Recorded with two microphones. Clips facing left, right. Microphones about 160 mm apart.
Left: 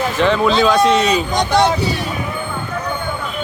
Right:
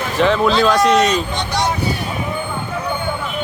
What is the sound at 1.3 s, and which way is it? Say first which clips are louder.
Speech: left 6 dB; 55° left (ahead or behind).